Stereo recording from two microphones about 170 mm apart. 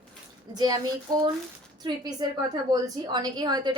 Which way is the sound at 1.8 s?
25° right (ahead or behind).